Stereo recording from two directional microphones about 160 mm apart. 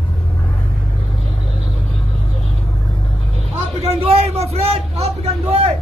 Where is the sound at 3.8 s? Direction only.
40° right (ahead or behind).